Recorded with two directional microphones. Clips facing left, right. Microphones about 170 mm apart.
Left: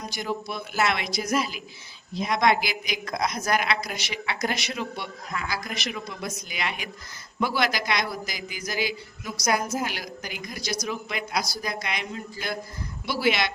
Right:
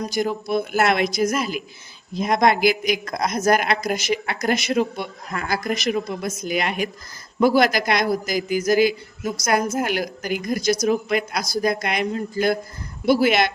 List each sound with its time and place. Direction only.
0.1 s a woman's voice: 45° right (ahead or behind)